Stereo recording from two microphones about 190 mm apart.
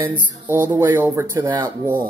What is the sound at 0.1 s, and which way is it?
Speech, 10° right (ahead or behind).